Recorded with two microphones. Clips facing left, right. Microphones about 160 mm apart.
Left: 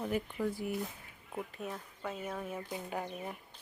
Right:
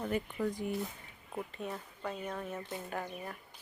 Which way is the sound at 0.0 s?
5° left (ahead or behind).